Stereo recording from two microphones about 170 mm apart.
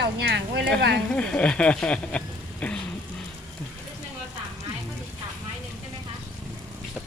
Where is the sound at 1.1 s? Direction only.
5° left (ahead or behind).